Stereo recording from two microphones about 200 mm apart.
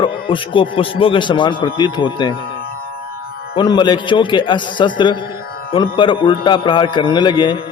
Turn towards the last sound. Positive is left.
turn(degrees=20)  # may be behind; listen again after turning